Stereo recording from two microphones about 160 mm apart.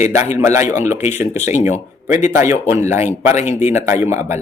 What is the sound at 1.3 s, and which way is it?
Speech, 45° left (ahead or behind).